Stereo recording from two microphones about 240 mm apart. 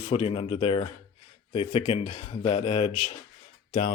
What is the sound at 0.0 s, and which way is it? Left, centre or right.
Speech, left.